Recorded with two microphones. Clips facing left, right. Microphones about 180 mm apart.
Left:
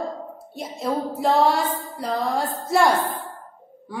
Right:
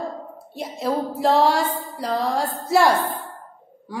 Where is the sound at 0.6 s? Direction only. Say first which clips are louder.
Right 2 dB; centre (ahead or behind).